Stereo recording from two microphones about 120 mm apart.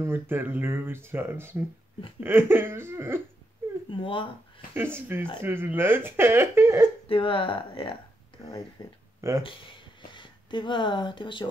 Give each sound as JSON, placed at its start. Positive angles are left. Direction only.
{"t": 0.0, "sound": "speech", "side_deg": -20}
{"t": 3.9, "sound": "speech", "side_deg": 45}
{"t": 4.7, "sound": "speech", "side_deg": -15}
{"t": 7.1, "sound": "speech", "side_deg": 45}
{"t": 8.4, "sound": "speech", "side_deg": 25}
{"t": 9.4, "sound": "speech", "side_deg": 45}